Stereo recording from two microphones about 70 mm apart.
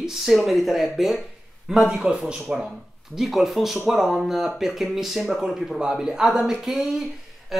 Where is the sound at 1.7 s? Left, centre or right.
Centre.